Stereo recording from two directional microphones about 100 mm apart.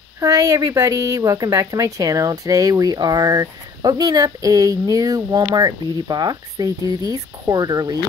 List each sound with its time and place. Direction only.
0.2 s a woman's voice: 35° right (ahead or behind)